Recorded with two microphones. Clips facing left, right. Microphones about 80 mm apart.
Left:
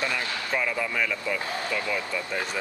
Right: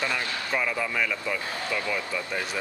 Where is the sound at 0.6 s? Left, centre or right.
Centre.